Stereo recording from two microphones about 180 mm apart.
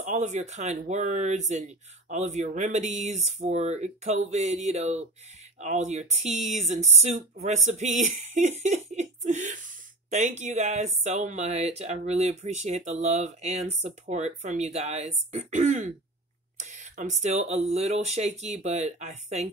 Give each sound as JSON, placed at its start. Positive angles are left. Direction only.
{"t": 0.0, "sound": "speech", "side_deg": -40}
{"t": 10.0, "sound": "a sound", "side_deg": -45}
{"t": 10.4, "sound": "speech", "side_deg": -40}